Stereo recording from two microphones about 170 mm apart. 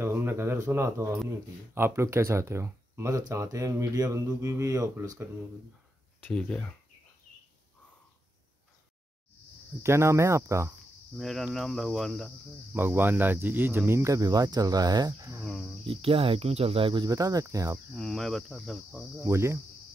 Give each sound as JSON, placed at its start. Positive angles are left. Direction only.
{"t": 0.0, "sound": "a sound", "side_deg": -15}
{"t": 1.8, "sound": "speech", "side_deg": -15}
{"t": 6.2, "sound": "speech", "side_deg": 10}
{"t": 9.8, "sound": "speech", "side_deg": -15}
{"t": 11.1, "sound": "speech", "side_deg": 0}
{"t": 12.7, "sound": "speech", "side_deg": -10}
{"t": 15.4, "sound": "speech", "side_deg": 0}
{"t": 15.8, "sound": "speech", "side_deg": -35}
{"t": 17.9, "sound": "speech", "side_deg": 0}
{"t": 19.2, "sound": "speech", "side_deg": -15}